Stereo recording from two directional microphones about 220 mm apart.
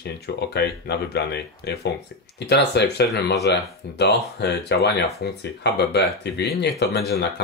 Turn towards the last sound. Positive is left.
turn(degrees=45)  # may be behind; listen again after turning